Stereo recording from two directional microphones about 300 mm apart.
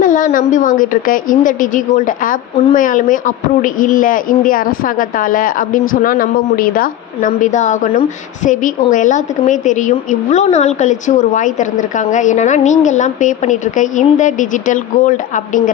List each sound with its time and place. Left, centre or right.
0.0 s a woman's voice: left